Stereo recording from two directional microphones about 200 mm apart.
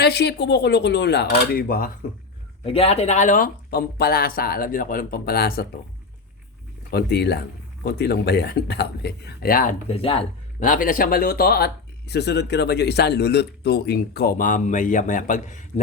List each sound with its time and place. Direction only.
0.0 s speech: 55° left (ahead or behind)
2.6 s speech: 30° left (ahead or behind); by 5.6 s 50° left (ahead or behind)
6.9 s speech: 55° left (ahead or behind)
9.9 s speech: 30° left (ahead or behind)
10.6 s speech: 40° left (ahead or behind)